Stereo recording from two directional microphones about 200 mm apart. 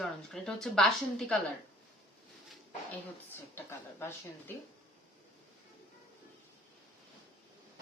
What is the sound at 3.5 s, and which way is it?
Speech, 10° left (ahead or behind).